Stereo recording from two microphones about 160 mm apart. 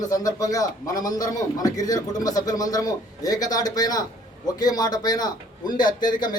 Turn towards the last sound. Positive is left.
turn(degrees=25)  # may be behind; listen again after turning